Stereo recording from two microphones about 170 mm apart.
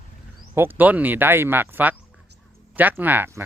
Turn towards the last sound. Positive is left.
turn(degrees=-15)  # may be behind; listen again after turning